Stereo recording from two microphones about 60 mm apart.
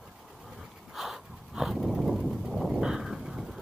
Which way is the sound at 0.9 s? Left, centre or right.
Centre.